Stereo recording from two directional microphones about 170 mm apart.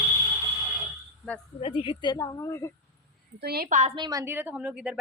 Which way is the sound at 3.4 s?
65° right (ahead or behind).